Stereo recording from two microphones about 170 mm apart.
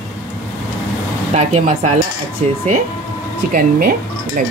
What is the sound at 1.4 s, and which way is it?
Speech, 40° right (ahead or behind).